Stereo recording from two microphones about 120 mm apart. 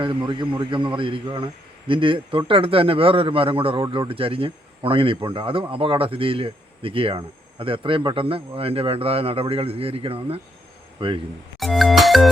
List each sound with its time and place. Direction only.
0.0 s speech: 45° right (ahead or behind)
11.6 s music: centre (ahead or behind)